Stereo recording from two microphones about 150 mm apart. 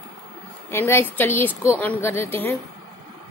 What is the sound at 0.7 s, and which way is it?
Speech, 15° left (ahead or behind).